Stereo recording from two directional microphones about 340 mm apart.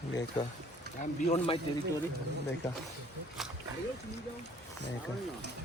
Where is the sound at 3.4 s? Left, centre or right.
Centre.